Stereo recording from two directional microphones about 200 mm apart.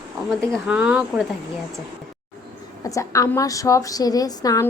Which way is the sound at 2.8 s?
15° left (ahead or behind).